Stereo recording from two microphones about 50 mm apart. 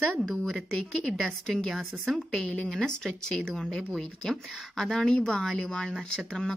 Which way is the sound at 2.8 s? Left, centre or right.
Centre.